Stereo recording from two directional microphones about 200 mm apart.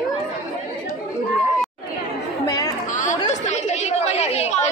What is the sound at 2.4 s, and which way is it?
Chatter, 20° left (ahead or behind).